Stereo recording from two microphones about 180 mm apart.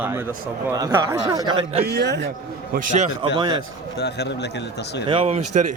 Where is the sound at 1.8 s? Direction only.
65° right (ahead or behind).